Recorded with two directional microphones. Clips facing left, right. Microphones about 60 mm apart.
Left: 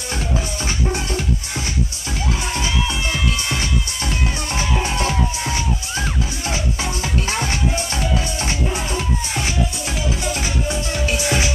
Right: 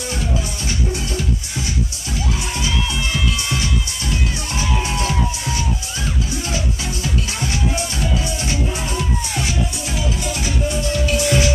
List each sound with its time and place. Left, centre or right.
0.7 s music: left
4.8 s music: left
8.7 s music: left